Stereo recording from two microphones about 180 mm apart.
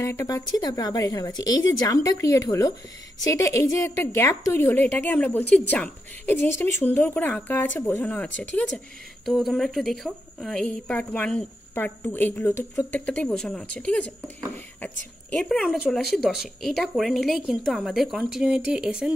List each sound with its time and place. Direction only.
0.0 s speech: 15° left (ahead or behind)
15.3 s speech: centre (ahead or behind)